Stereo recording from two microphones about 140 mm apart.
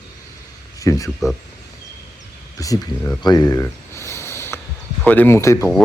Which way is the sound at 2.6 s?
25° left (ahead or behind).